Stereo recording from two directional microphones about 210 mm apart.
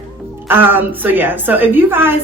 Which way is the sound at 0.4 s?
10° right (ahead or behind).